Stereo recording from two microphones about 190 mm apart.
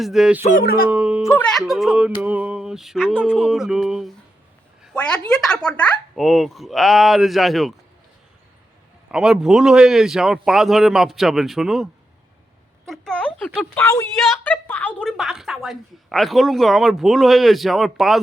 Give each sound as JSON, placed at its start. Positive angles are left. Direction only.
{"t": 0.0, "sound": "a woman's voice", "side_deg": 0}
{"t": 0.4, "sound": "speech", "side_deg": 50}
{"t": 0.9, "sound": "speech", "side_deg": -10}
{"t": 1.2, "sound": "a woman's voice", "side_deg": 10}
{"t": 9.1, "sound": "a woman's voice", "side_deg": -5}